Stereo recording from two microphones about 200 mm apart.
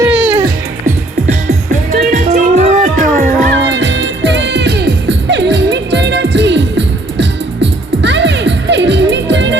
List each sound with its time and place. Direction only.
0.0 s music: 10° right (ahead or behind)
0.9 s music: 35° right (ahead or behind)
3.5 s music: 60° right (ahead or behind)